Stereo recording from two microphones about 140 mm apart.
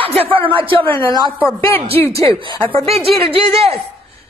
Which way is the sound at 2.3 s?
35° right (ahead or behind).